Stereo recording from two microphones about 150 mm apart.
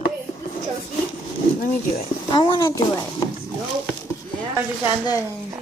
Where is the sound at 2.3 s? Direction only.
30° left (ahead or behind).